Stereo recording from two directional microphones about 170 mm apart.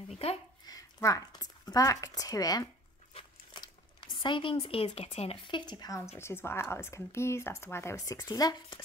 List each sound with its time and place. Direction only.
0.1 s speech: 35° left (ahead or behind)
0.7 s speech: 20° left (ahead or behind)